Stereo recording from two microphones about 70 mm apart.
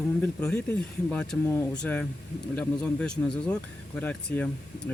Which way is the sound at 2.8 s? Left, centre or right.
Centre.